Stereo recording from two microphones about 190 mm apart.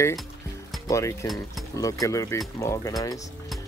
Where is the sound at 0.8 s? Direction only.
15° left (ahead or behind).